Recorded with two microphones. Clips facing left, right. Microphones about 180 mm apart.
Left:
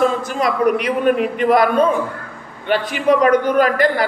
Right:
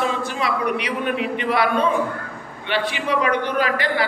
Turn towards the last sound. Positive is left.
turn(degrees=45)  # may be behind; listen again after turning